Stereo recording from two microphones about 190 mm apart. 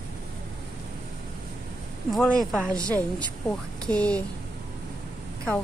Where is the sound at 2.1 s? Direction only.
5° left (ahead or behind).